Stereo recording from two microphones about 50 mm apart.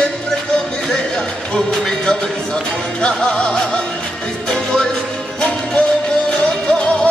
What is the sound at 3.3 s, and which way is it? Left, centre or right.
Music, left.